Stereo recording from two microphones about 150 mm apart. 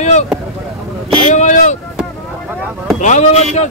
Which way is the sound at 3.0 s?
50° left (ahead or behind).